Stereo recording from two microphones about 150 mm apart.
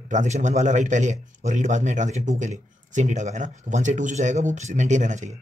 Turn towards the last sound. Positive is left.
turn(degrees=-55)  # may be behind; listen again after turning